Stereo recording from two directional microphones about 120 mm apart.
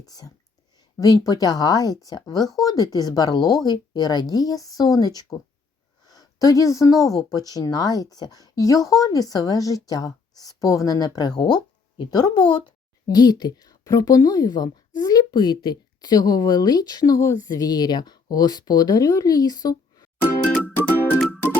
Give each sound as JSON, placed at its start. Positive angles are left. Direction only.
{"t": 0.0, "sound": "a woman's voice", "side_deg": 30}
{"t": 20.2, "sound": "music", "side_deg": 10}